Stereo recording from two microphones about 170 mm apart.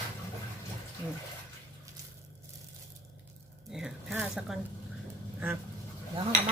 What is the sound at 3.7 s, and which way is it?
Speech, 5° right (ahead or behind).